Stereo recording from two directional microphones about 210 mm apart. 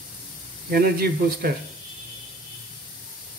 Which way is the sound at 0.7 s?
45° right (ahead or behind).